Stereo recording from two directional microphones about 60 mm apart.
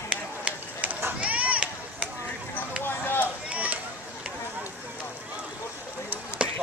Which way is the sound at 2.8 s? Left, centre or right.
Left.